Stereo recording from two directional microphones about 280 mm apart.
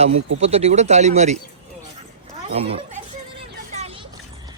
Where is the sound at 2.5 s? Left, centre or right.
Right.